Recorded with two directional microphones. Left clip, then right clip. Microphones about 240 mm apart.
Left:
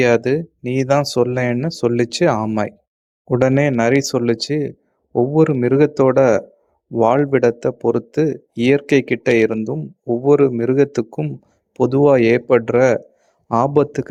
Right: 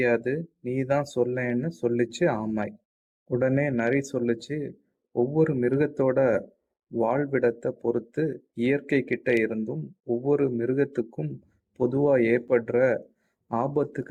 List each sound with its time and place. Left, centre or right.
0.0 s speech: left